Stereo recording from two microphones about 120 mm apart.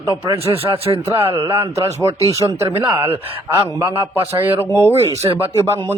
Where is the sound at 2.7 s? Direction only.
15° right (ahead or behind).